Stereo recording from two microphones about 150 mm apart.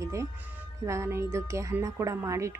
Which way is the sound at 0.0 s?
20° right (ahead or behind).